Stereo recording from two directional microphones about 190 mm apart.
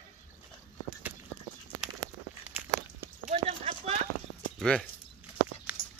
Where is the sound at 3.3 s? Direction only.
35° right (ahead or behind).